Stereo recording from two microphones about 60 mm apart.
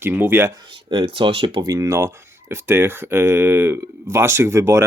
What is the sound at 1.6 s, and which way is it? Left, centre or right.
Speech, right.